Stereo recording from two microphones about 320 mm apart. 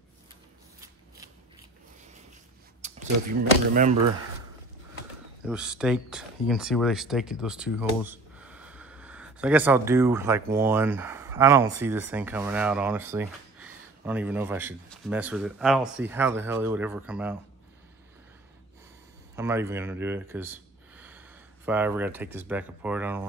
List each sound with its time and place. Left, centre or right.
0.7 s a sound: centre
2.8 s speech: right
5.4 s speech: centre
19.3 s speech: centre